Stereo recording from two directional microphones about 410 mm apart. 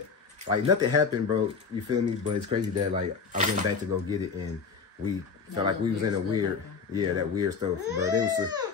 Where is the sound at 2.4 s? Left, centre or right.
Centre.